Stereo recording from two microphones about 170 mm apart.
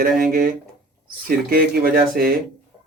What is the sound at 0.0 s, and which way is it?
Speech, 55° right (ahead or behind).